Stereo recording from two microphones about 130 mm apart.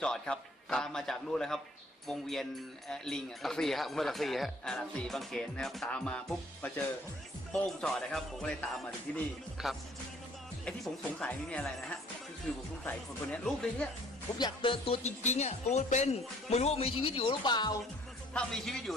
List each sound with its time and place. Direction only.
0.0 s speech: 5° left (ahead or behind)
9.6 s speech: centre (ahead or behind)
12.8 s speech: 10° left (ahead or behind)
14.3 s speech: 35° left (ahead or behind)
15.0 s speech: 60° left (ahead or behind); by 17.7 s 35° left (ahead or behind)
18.3 s speech: 5° left (ahead or behind)